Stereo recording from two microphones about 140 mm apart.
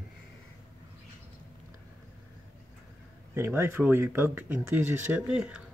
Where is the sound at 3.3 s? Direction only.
15° right (ahead or behind).